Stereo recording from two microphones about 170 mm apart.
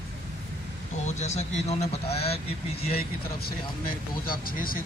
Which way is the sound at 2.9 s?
65° left (ahead or behind).